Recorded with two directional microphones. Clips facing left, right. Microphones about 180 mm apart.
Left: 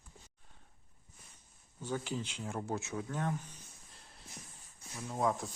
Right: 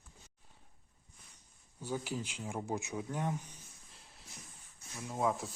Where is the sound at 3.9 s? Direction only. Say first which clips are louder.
Left 1 dB; centre (ahead or behind).